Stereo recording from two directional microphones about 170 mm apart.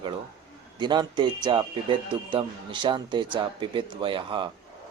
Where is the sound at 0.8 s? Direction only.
25° right (ahead or behind).